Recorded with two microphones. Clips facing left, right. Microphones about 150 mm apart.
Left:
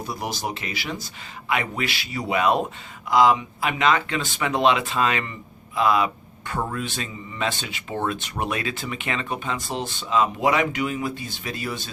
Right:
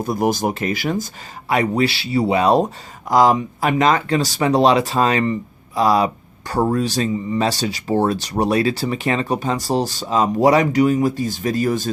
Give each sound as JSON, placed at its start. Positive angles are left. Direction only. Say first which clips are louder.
{"t": 0.0, "sound": "speech", "louder": "right 10 dB", "side_deg": -50}